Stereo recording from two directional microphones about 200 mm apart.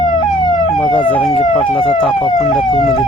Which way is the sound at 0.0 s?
20° left (ahead or behind).